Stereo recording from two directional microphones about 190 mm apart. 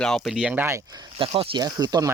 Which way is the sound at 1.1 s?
30° right (ahead or behind).